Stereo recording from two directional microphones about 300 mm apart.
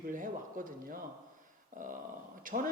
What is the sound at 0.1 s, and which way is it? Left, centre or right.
Speech, right.